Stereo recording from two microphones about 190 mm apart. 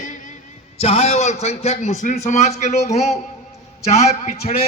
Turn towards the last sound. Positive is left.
turn(degrees=50)  # may be behind; listen again after turning